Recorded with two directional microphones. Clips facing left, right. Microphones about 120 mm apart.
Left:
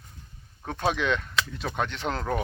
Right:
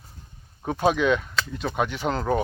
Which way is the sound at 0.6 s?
5° right (ahead or behind).